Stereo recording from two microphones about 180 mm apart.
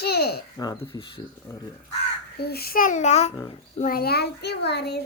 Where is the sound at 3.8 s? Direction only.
55° left (ahead or behind).